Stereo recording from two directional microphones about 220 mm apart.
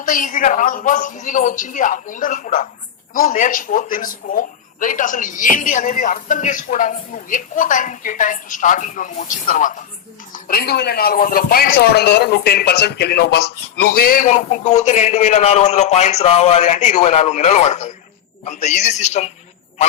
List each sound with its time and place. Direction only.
0.0 s speech: 40° left (ahead or behind)